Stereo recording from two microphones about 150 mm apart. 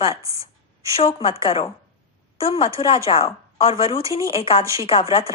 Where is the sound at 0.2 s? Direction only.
20° right (ahead or behind).